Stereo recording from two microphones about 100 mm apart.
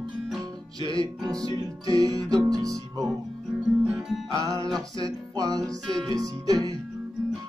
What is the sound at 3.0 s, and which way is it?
Music, 5° right (ahead or behind).